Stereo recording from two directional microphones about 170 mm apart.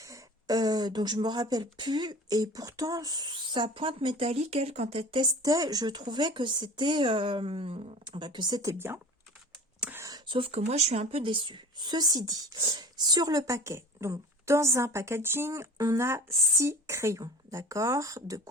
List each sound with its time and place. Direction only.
0.0 s speech: 20° right (ahead or behind)
9.8 s a sound: 15° right (ahead or behind)
10.2 s speech: 30° right (ahead or behind)